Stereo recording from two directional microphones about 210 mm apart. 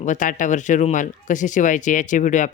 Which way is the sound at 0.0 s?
35° left (ahead or behind).